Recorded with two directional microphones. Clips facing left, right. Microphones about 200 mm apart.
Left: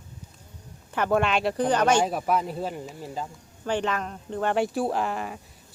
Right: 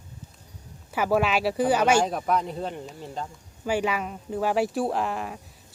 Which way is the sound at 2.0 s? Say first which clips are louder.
Even; 5° left (ahead or behind).